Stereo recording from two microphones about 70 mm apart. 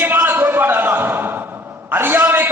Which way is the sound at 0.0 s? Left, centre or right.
Right.